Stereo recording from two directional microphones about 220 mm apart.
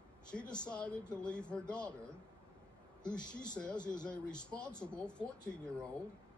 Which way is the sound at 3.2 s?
20° left (ahead or behind).